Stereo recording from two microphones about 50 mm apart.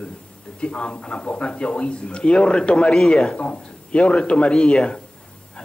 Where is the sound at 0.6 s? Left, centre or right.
Left.